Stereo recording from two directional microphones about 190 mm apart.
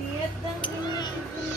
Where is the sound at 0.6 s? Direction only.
20° left (ahead or behind).